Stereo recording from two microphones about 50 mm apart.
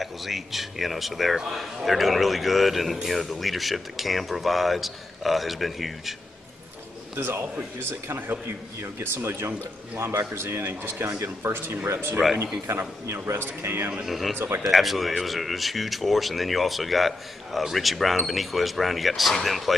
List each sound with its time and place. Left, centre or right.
0.0 s speech: centre
7.2 s a man's voice: right
8.8 s a man's voice: right
12.6 s a man's voice: right
13.2 s a man's voice: right
14.0 s speech: centre